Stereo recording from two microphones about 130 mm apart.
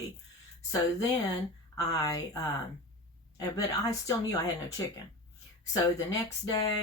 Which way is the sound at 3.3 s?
25° left (ahead or behind).